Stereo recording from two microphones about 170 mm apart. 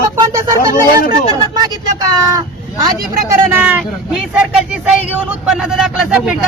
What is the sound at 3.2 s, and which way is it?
Speech, 10° right (ahead or behind).